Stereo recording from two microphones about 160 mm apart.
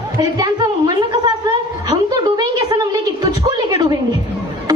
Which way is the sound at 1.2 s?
25° right (ahead or behind).